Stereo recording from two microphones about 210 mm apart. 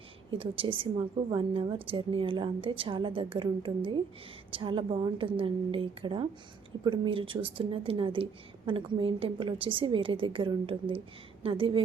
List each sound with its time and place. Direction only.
0.3 s a woman's voice: 25° right (ahead or behind)